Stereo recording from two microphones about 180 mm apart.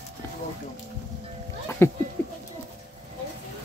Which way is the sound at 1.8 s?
15° left (ahead or behind).